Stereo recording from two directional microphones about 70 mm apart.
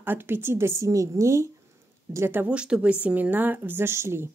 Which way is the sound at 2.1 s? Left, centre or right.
Right.